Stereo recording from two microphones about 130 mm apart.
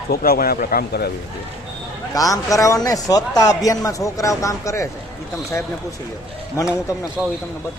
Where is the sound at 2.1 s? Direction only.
25° left (ahead or behind).